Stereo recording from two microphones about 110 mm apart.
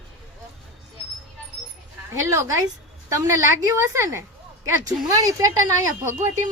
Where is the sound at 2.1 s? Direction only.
25° right (ahead or behind).